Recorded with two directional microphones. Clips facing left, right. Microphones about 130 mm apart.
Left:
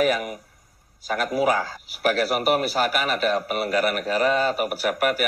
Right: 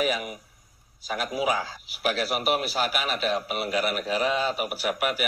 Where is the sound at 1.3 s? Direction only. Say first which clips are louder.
Left 5 dB; 45° left (ahead or behind).